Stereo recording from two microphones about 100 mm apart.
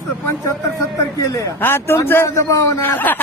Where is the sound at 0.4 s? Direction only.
30° left (ahead or behind).